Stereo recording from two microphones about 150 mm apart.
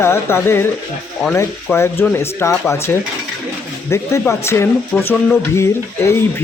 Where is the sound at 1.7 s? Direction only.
15° left (ahead or behind).